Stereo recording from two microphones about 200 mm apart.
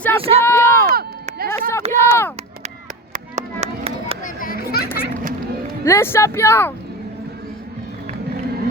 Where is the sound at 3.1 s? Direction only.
35° right (ahead or behind).